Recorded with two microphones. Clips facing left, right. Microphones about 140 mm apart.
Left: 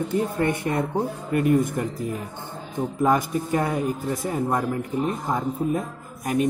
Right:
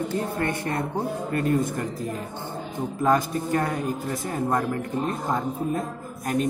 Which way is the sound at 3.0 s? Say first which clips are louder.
Even; 15° left (ahead or behind).